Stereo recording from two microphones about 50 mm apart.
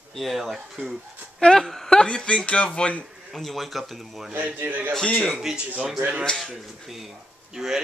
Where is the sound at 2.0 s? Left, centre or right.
Centre.